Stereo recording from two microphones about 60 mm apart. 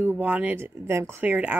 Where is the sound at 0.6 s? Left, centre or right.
Right.